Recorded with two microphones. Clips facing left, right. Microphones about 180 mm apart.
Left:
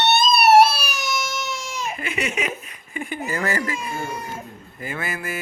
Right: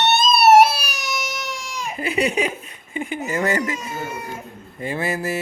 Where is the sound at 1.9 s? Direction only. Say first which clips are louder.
Right 8 dB; 35° right (ahead or behind).